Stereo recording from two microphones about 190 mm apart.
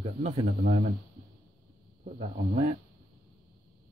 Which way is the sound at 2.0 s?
40° right (ahead or behind).